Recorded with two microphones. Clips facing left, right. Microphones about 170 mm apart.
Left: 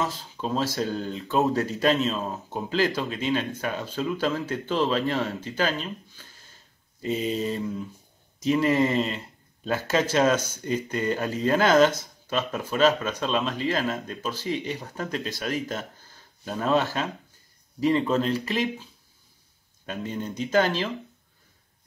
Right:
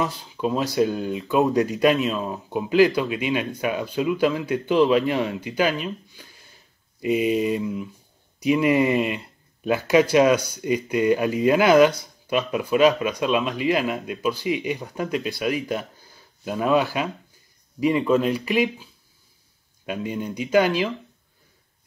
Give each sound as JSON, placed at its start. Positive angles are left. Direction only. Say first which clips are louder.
{"t": 0.0, "sound": "speech", "louder": "right 4 dB", "side_deg": -15}
{"t": 19.9, "sound": "speech", "louder": "right 4 dB", "side_deg": -10}